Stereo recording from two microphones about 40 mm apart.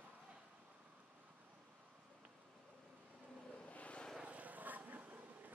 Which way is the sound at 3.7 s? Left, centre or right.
Left.